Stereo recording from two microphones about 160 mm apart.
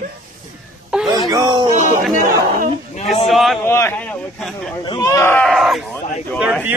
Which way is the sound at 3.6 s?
15° left (ahead or behind).